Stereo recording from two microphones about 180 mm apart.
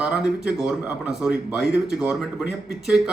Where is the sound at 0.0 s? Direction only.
5° right (ahead or behind).